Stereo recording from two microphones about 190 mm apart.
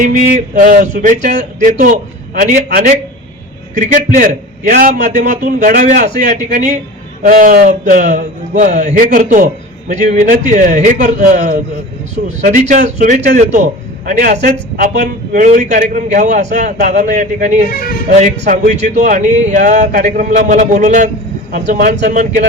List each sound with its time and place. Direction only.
0.0 s a man's voice: 45° right (ahead or behind)
2.6 s a man's voice: 55° right (ahead or behind)
14.9 s a man's voice: 60° right (ahead or behind)
15.4 s a man's voice: 40° right (ahead or behind)
17.7 s speech: 50° left (ahead or behind)
18.2 s a man's voice: 40° right (ahead or behind)